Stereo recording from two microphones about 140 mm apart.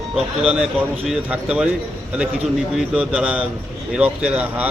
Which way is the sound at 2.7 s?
5° right (ahead or behind).